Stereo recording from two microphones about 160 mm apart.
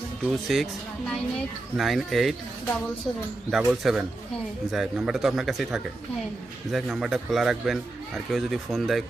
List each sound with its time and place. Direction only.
0.3 s speech: centre (ahead or behind)
3.5 s speech: 5° right (ahead or behind)